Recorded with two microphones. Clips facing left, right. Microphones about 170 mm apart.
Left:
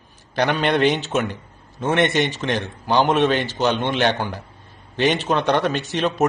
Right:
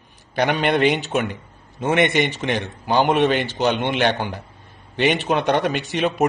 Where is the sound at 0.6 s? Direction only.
10° right (ahead or behind).